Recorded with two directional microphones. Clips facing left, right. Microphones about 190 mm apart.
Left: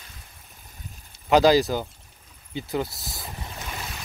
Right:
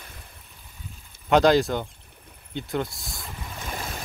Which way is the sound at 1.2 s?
Centre (ahead or behind).